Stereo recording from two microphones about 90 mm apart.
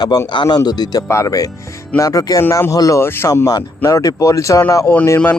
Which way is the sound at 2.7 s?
40° left (ahead or behind).